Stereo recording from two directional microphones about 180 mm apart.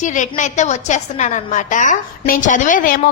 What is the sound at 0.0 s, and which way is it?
A woman's voice, 45° left (ahead or behind).